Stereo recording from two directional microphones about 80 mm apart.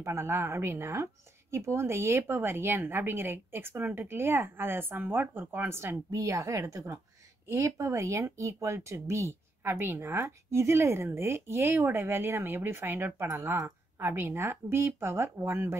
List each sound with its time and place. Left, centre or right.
0.0 s a woman's voice: right